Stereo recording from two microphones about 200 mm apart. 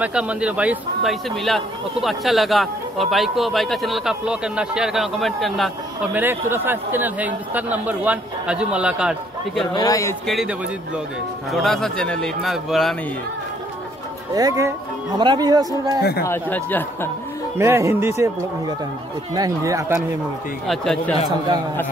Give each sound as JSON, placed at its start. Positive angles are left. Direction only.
{"t": 0.0, "sound": "speech", "side_deg": -5}
{"t": 6.1, "sound": "speech", "side_deg": -10}
{"t": 9.8, "sound": "speech", "side_deg": 15}
{"t": 10.2, "sound": "speech", "side_deg": 0}
{"t": 11.5, "sound": "speech", "side_deg": 0}
{"t": 14.3, "sound": "speech", "side_deg": -15}
{"t": 16.0, "sound": "speech", "side_deg": 50}
{"t": 16.3, "sound": "speech", "side_deg": 10}
{"t": 17.6, "sound": "speech", "side_deg": -15}
{"t": 20.6, "sound": "speech", "side_deg": 0}